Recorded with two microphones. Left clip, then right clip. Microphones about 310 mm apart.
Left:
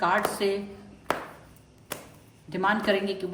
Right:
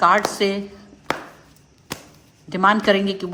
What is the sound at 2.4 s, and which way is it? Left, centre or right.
Speech, right.